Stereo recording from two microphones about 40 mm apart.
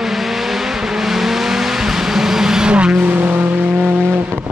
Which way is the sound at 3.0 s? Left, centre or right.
Right.